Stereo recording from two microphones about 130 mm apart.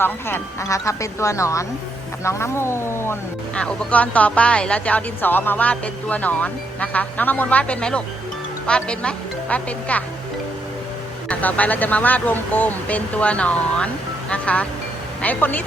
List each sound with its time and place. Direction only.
0.0 s speech: 15° left (ahead or behind)
3.5 s speech: 10° left (ahead or behind)
11.3 s speech: 10° left (ahead or behind)